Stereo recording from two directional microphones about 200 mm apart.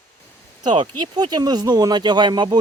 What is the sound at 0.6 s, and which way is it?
Speech, 20° right (ahead or behind).